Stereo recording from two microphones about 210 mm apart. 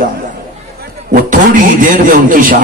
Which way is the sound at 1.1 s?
40° right (ahead or behind).